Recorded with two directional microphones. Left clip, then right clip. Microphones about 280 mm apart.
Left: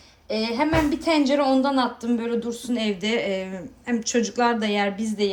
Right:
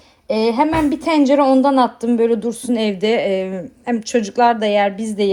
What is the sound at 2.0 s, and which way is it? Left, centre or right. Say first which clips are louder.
Speech: right 10 dB; centre.